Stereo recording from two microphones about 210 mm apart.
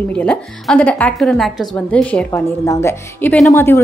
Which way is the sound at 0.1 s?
5° left (ahead or behind).